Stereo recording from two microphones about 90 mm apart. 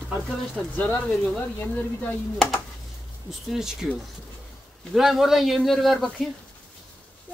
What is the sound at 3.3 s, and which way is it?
Speech, 5° right (ahead or behind).